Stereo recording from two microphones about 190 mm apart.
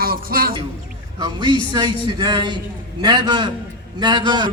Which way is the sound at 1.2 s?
25° right (ahead or behind).